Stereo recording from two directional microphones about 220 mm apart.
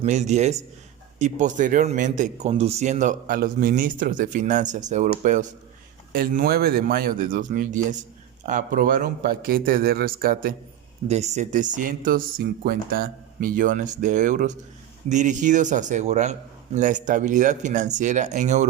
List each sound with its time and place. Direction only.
0.0 s speech: 30° right (ahead or behind)
11.1 s speech: 30° right (ahead or behind)